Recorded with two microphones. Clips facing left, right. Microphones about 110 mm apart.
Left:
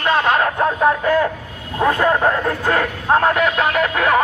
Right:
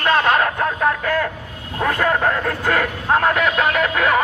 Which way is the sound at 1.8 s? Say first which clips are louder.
Left 3 dB; 20° left (ahead or behind).